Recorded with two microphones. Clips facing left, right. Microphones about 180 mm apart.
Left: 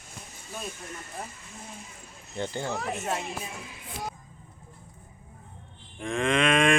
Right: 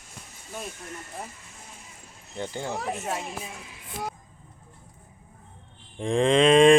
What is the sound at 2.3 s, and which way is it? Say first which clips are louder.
Speech: even; 10° right (ahead or behind).